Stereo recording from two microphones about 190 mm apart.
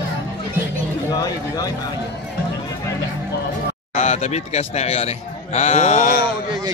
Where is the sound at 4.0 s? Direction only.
35° left (ahead or behind).